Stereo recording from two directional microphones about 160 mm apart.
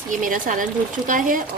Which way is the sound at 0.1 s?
55° right (ahead or behind).